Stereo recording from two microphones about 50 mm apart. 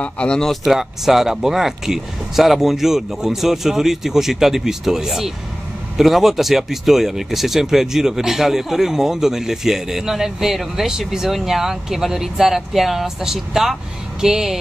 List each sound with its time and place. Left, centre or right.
0.0 s speech: centre
0.5 s speech: centre